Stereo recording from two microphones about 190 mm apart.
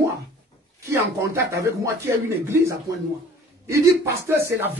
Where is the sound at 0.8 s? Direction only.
15° right (ahead or behind).